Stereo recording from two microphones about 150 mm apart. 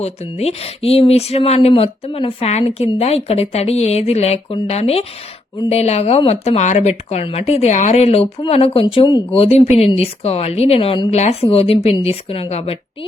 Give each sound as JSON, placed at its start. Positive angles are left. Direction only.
{"t": 0.0, "sound": "speech", "side_deg": 45}